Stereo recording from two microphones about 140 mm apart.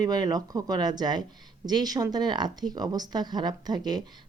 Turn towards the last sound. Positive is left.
turn(degrees=-30)  # may be behind; listen again after turning